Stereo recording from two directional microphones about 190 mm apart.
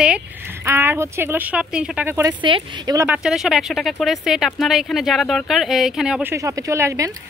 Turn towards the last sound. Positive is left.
turn(degrees=-15)  # may be behind; listen again after turning